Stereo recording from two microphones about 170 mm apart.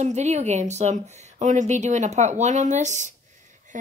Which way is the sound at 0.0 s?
40° right (ahead or behind).